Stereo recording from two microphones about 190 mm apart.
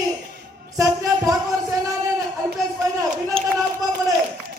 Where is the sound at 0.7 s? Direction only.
15° right (ahead or behind).